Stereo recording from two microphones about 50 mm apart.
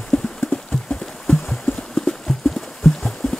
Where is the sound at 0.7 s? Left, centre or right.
Centre.